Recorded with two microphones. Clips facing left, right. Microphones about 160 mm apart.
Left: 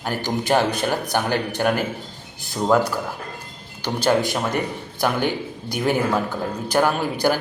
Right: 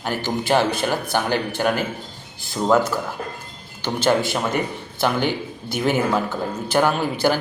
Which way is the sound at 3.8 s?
10° left (ahead or behind).